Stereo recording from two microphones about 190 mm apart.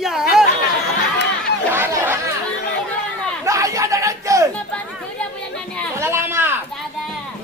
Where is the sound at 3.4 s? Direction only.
15° right (ahead or behind).